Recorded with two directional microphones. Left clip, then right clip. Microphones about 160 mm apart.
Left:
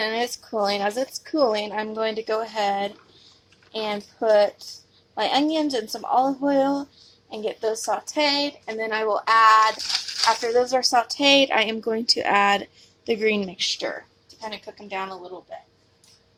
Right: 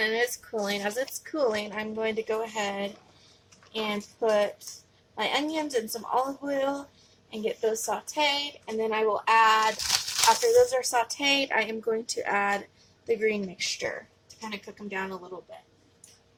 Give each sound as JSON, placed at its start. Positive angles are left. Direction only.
{"t": 0.0, "sound": "a woman's voice", "side_deg": 55}
{"t": 1.7, "sound": "a woman's voice", "side_deg": 60}